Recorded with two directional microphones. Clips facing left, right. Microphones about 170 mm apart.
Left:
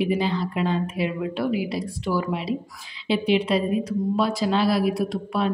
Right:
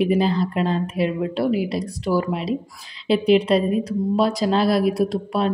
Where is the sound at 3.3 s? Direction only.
40° right (ahead or behind).